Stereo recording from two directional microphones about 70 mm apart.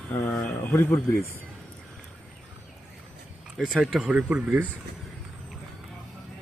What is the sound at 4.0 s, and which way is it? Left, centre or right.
Speech, centre.